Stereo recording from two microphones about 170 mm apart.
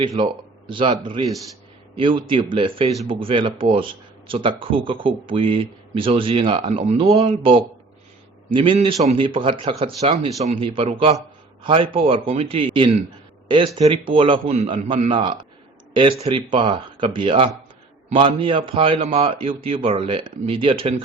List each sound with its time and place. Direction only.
0.0 s a man's voice: 30° right (ahead or behind)